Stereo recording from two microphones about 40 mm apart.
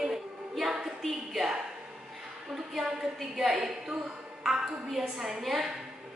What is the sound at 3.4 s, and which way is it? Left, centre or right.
A woman's voice, centre.